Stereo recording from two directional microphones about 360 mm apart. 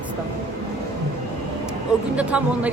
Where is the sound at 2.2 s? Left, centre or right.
Centre.